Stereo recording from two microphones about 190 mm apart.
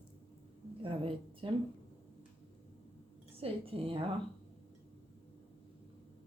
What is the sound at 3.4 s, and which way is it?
Speech, 30° right (ahead or behind).